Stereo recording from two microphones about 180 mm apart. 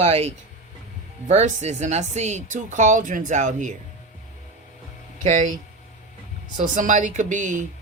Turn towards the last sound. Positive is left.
turn(degrees=-45)  # may be behind; listen again after turning